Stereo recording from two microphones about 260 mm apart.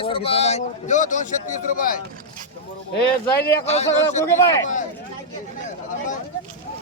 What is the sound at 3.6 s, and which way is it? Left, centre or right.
Speech, left.